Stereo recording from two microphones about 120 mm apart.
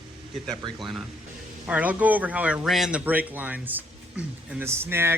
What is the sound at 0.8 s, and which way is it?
Speech, centre (ahead or behind).